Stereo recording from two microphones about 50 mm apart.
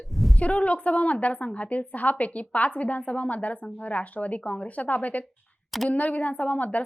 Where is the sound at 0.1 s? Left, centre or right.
Centre.